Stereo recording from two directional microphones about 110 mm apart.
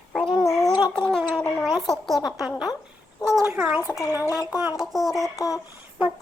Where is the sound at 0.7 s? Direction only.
40° left (ahead or behind).